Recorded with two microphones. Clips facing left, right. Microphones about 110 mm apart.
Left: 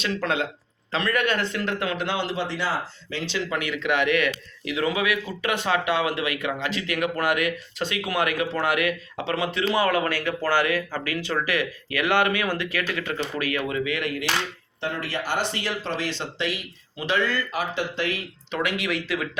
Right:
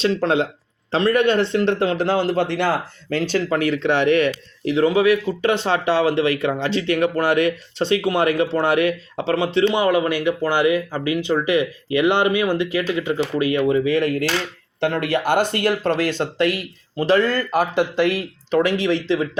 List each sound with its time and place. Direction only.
0.0 s a man's voice: 30° right (ahead or behind)
14.8 s speech: 65° right (ahead or behind)
17.0 s speech: 40° right (ahead or behind)
18.5 s a man's voice: 30° right (ahead or behind)